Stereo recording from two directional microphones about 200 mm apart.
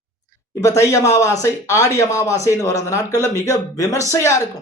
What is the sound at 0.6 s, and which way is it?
Speech, 15° left (ahead or behind).